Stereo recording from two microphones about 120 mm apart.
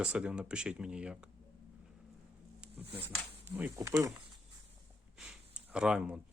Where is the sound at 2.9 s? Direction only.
15° right (ahead or behind).